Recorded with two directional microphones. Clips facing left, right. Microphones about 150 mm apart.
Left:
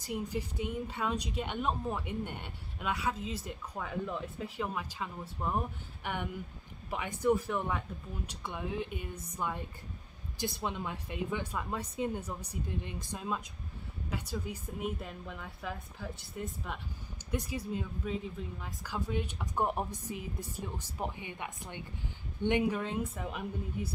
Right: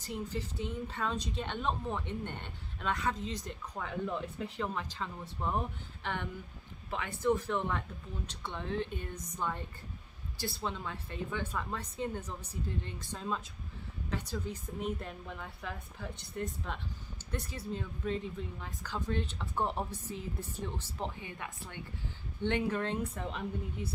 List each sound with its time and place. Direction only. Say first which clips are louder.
0.0 s a woman's voice: left 2 dB; 10° left (ahead or behind)